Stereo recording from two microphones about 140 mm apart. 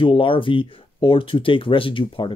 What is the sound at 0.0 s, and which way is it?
Speech, 40° left (ahead or behind).